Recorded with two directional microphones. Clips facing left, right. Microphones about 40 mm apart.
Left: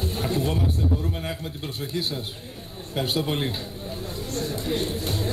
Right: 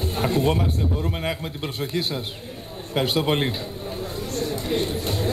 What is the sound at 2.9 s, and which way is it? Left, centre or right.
Speech, right.